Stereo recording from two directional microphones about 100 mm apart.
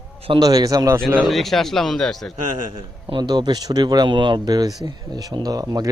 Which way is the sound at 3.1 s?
45° right (ahead or behind).